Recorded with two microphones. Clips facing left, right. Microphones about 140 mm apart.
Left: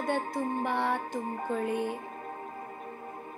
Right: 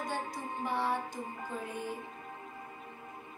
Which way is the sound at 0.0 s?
60° left (ahead or behind).